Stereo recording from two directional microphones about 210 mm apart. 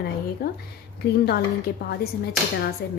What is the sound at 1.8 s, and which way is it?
Speech, 45° left (ahead or behind).